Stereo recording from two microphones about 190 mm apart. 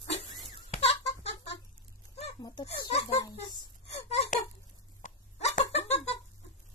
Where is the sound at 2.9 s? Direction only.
35° left (ahead or behind).